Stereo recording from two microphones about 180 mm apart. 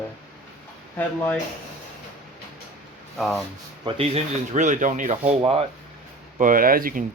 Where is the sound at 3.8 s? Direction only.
30° right (ahead or behind).